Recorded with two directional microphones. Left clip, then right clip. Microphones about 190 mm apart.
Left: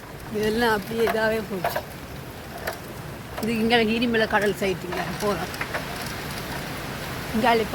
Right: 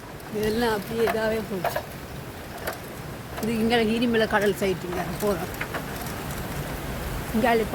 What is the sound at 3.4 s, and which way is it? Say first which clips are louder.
Speech: left 2 dB; centre (ahead or behind).